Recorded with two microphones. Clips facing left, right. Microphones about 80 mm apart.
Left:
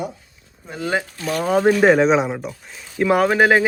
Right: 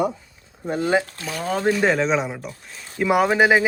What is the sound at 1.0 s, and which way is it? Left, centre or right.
Speech, centre.